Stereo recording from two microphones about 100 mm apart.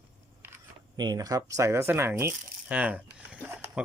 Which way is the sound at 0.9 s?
40° right (ahead or behind).